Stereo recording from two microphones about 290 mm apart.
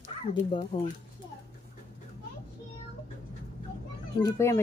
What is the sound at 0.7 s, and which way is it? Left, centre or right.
Speech, centre.